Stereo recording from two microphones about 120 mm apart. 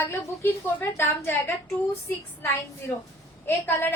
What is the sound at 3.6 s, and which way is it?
Speech, 20° left (ahead or behind).